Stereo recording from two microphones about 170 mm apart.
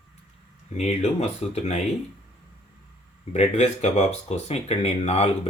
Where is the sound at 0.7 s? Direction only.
40° left (ahead or behind).